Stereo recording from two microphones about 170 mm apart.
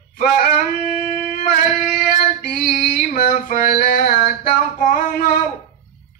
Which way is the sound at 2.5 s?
55° left (ahead or behind).